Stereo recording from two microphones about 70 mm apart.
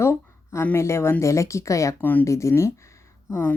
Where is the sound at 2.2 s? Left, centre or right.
Left.